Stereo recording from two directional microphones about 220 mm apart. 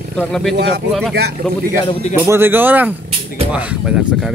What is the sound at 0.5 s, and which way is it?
Speech, 50° right (ahead or behind).